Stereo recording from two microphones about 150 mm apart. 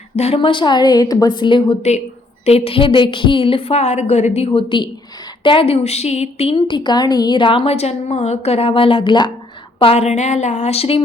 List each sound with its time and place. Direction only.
0.2 s a woman's voice: 40° left (ahead or behind)